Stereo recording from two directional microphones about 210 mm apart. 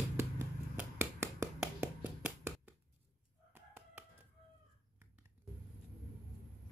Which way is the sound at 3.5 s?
10° right (ahead or behind).